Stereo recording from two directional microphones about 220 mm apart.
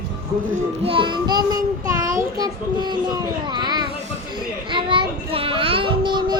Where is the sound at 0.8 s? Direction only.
25° right (ahead or behind).